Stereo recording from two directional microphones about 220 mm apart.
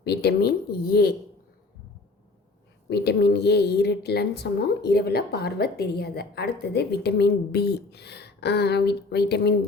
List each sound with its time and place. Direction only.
0.0 s a woman's voice: 50° left (ahead or behind)
2.9 s a woman's voice: 50° left (ahead or behind)